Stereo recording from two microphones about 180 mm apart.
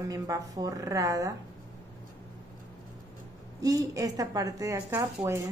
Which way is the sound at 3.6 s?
20° right (ahead or behind).